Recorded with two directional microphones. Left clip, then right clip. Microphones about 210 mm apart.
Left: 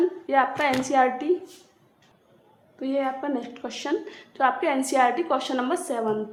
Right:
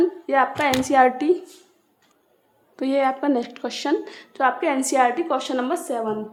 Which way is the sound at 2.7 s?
45° right (ahead or behind).